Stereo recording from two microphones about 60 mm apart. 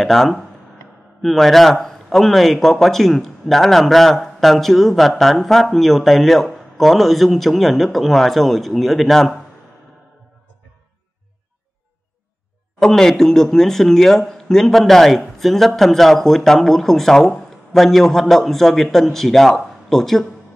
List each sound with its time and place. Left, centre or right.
0.0 s a man's voice: centre
12.7 s a man's voice: centre